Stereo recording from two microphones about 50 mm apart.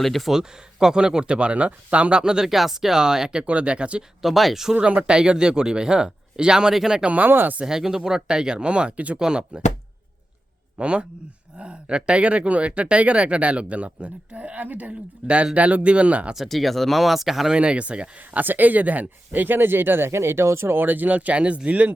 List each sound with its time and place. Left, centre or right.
0.0 s speech: centre
0.3 s speech: centre
3.4 s speech: right
4.2 s speech: centre
4.7 s speech: right
7.0 s speech: right
7.3 s speech: right
7.6 s speech: centre
10.8 s speech: right
16.3 s speech: centre
17.5 s speech: right
18.3 s speech: right
20.7 s speech: right